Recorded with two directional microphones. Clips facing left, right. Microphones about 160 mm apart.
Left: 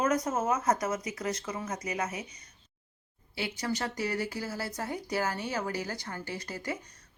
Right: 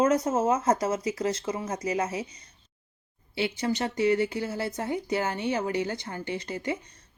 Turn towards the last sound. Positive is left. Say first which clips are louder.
# right 5 dB
turn(degrees=-20)  # may be behind; listen again after turning